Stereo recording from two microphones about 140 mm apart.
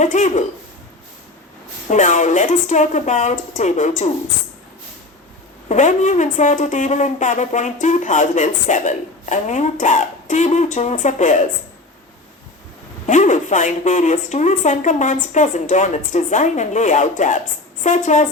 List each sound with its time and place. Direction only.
0.0 s speech: 60° left (ahead or behind)
1.9 s speech: 60° left (ahead or behind)
5.6 s speech: 60° left (ahead or behind)
13.1 s speech: 60° left (ahead or behind)